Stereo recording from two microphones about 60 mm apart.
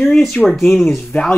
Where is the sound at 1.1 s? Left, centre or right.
Left.